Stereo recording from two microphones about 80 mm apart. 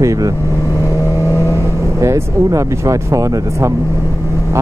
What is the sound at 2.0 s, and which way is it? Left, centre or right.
Speech, right.